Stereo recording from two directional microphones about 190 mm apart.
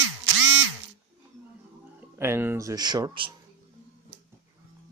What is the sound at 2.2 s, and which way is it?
Speech, 10° right (ahead or behind).